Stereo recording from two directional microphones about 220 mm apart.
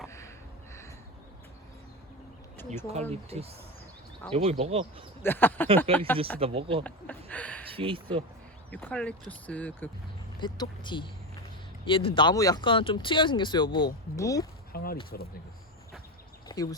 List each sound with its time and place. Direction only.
2.9 s speech: 30° right (ahead or behind)
5.2 s speech: 10° left (ahead or behind)
5.9 s speech: 25° right (ahead or behind)
7.3 s speech: 5° left (ahead or behind)
7.7 s speech: 25° right (ahead or behind)
8.7 s speech: 5° left (ahead or behind)
10.4 s speech: 20° left (ahead or behind)
14.7 s a sound: 45° left (ahead or behind)
16.5 s a sound: 20° left (ahead or behind)